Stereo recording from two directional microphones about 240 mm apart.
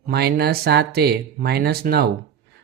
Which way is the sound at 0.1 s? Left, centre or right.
Right.